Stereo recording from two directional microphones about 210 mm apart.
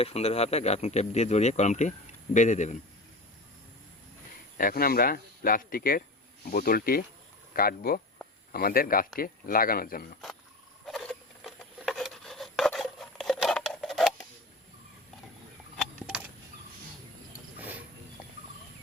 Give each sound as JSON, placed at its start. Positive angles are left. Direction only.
{"t": 0.0, "sound": "speech", "side_deg": 30}
{"t": 4.5, "sound": "speech", "side_deg": 45}
{"t": 10.8, "sound": "rub", "side_deg": 0}
{"t": 16.0, "sound": "a sound", "side_deg": -5}